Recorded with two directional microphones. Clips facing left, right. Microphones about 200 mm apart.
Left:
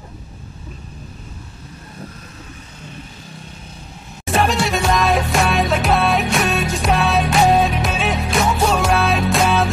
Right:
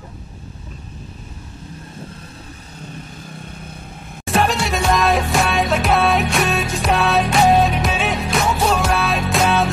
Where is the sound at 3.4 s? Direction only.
55° right (ahead or behind).